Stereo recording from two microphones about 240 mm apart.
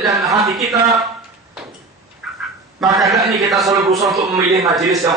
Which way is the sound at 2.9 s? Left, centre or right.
Centre.